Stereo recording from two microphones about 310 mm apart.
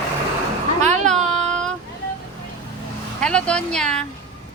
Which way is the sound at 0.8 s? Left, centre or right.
Right.